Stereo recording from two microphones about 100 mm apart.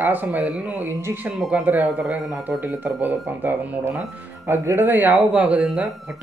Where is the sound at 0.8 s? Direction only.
25° right (ahead or behind).